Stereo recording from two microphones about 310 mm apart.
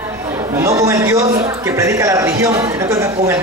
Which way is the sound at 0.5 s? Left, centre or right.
Centre.